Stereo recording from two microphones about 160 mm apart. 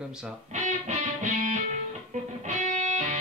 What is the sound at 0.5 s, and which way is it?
Music, 50° right (ahead or behind).